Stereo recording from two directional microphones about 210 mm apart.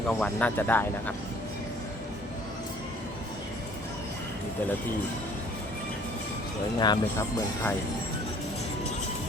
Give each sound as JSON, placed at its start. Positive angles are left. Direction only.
{"t": 0.1, "sound": "speech", "side_deg": 5}
{"t": 6.7, "sound": "speech", "side_deg": 20}